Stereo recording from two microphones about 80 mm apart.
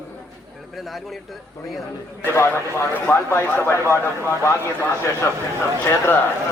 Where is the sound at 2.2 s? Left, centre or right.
Left.